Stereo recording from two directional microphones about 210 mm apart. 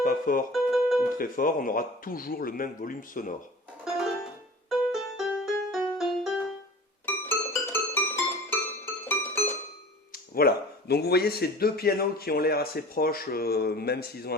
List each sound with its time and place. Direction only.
0.0 s music: 40° left (ahead or behind)
0.5 s music: centre (ahead or behind)
1.2 s speech: 40° left (ahead or behind)
3.8 s music: centre (ahead or behind)
10.1 s speech: 45° left (ahead or behind)